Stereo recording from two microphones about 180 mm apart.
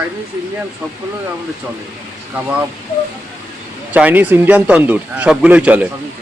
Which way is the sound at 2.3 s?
10° right (ahead or behind).